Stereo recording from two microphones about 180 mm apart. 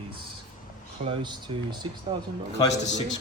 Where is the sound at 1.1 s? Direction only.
25° right (ahead or behind).